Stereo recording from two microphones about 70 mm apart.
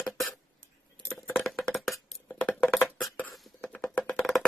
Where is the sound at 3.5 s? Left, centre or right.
Centre.